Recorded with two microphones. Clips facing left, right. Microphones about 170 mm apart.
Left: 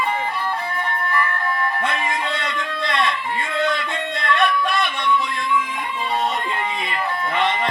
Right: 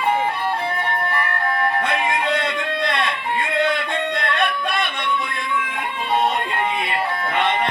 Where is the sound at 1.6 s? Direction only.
60° right (ahead or behind).